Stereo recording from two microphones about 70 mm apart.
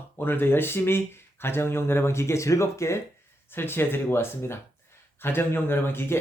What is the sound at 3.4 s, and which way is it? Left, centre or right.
Speech, left.